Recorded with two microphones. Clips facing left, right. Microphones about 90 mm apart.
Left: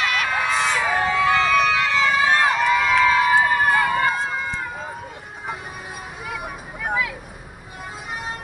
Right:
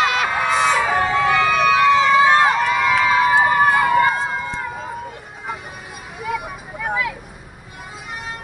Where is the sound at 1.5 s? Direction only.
25° right (ahead or behind).